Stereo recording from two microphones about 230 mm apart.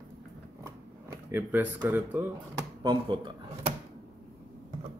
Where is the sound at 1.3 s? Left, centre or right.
Centre.